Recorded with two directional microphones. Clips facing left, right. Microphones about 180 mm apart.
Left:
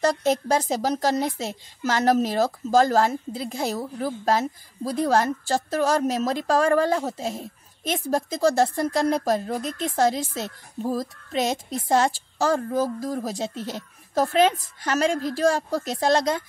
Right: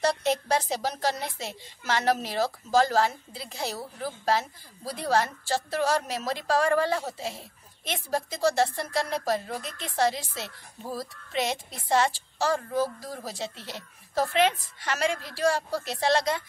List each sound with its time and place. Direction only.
0.0 s a woman's voice: 45° left (ahead or behind)